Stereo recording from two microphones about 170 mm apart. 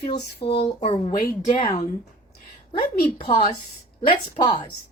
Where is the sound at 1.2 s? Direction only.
60° left (ahead or behind).